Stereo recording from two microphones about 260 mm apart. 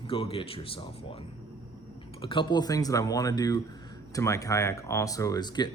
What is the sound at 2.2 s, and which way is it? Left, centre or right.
Speech, centre.